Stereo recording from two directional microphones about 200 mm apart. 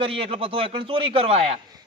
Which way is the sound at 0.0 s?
25° right (ahead or behind).